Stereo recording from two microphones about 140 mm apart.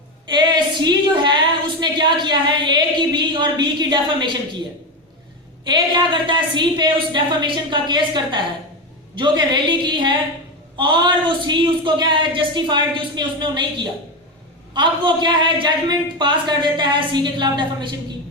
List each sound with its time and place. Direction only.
0.3 s a woman's voice: 30° right (ahead or behind)
5.6 s a woman's voice: 35° right (ahead or behind)